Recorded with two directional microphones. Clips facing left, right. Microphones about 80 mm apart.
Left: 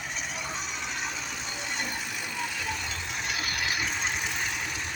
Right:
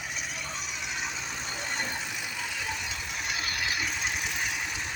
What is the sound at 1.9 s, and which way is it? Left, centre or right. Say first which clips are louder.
Vehicle: left 1 dB; centre.